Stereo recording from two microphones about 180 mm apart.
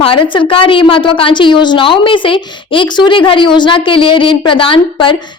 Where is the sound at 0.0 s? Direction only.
30° left (ahead or behind).